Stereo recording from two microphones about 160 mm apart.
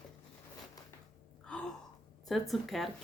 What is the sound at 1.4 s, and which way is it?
Gasp, 5° left (ahead or behind).